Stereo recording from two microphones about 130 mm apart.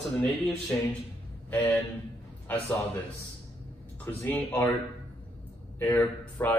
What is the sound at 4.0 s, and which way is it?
Speech, 15° left (ahead or behind).